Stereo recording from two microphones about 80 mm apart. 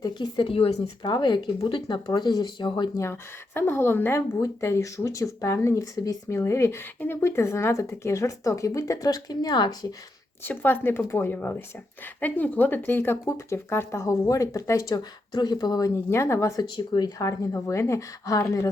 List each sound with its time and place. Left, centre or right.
0.0 s speech: left
1.6 s speech: left
3.0 s speech: left
4.4 s speech: left
6.3 s speech: left
10.4 s speech: left
13.2 s speech: left
16.0 s speech: left
16.6 s speech: left
17.2 s speech: left